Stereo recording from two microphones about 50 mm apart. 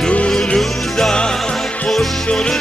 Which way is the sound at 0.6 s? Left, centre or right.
Centre.